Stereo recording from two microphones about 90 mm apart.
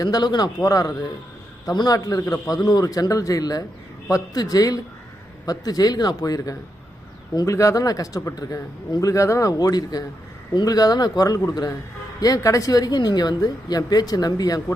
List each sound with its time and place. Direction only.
0.0 s a man's voice: 50° left (ahead or behind)